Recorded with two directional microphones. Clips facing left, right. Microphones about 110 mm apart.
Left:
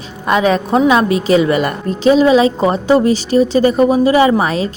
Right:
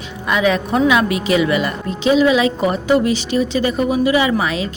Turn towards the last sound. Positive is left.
turn(degrees=40)  # may be behind; listen again after turning